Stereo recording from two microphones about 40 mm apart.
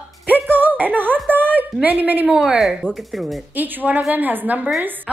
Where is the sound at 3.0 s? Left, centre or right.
Centre.